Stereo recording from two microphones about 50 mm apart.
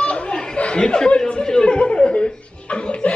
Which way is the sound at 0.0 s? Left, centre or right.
Left.